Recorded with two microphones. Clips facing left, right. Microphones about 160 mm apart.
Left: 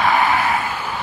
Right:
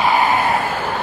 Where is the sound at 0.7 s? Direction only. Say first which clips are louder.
Right 4 dB; 55° right (ahead or behind).